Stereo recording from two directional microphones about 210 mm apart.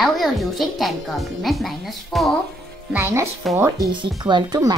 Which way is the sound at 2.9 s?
10° right (ahead or behind).